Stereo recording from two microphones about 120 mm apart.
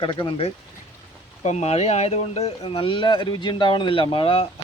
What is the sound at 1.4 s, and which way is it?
Speech, 70° left (ahead or behind).